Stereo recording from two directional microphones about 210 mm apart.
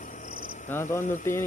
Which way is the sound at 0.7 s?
10° left (ahead or behind).